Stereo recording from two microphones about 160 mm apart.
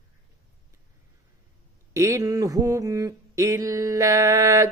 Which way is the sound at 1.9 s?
20° right (ahead or behind).